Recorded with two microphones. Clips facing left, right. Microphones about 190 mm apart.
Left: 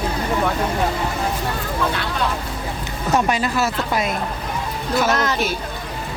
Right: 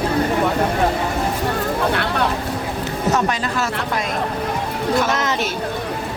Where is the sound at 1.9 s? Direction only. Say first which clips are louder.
Right 4 dB; 60° right (ahead or behind).